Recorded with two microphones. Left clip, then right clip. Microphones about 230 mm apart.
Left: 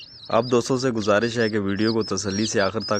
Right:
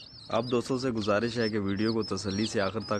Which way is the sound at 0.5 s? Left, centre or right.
Left.